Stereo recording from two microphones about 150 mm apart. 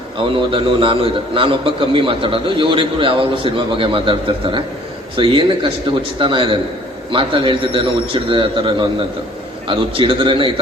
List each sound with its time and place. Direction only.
0.3 s a man's voice: 35° right (ahead or behind)